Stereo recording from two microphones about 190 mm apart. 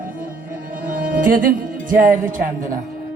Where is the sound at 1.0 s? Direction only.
45° right (ahead or behind).